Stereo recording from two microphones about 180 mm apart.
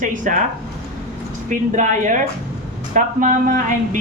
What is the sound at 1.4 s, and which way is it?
Speech, 45° right (ahead or behind).